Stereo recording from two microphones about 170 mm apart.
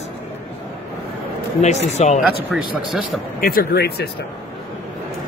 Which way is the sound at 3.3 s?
60° left (ahead or behind).